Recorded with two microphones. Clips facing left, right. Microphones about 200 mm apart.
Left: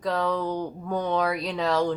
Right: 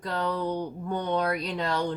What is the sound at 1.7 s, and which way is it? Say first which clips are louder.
Speech: left 6 dB; 90° left.